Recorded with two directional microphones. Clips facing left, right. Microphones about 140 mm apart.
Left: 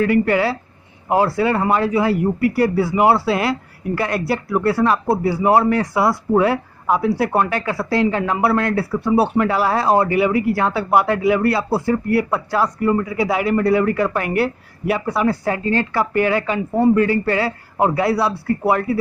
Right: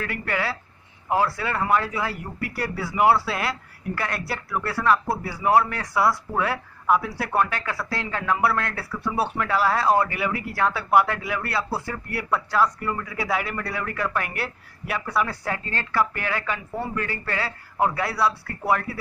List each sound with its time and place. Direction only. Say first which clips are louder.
0.0 s speech: left 12 dB; 20° left (ahead or behind)
3.0 s speech: left 3 dB; 30° left (ahead or behind)
3.9 s speech: left 9 dB; 15° left (ahead or behind)
15.0 s speech: left 5 dB; 30° left (ahead or behind)
15.4 s speech: left 10 dB; 10° left (ahead or behind)